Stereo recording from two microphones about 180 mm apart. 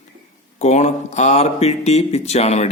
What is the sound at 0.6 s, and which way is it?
Speech, 40° left (ahead or behind).